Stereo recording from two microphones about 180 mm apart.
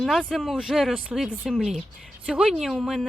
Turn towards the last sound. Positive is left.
turn(degrees=0)  # may be behind; listen again after turning